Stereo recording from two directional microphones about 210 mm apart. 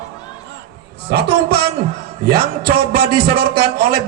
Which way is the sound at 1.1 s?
50° right (ahead or behind).